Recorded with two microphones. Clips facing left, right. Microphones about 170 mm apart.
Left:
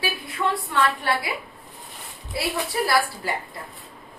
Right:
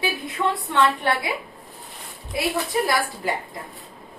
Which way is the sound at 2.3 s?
20° right (ahead or behind).